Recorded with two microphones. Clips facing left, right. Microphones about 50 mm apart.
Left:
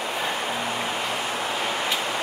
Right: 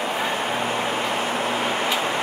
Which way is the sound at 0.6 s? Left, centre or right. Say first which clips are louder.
Right 3 dB; right.